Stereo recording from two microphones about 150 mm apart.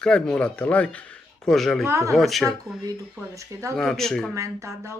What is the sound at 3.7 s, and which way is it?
Speech, 5° left (ahead or behind).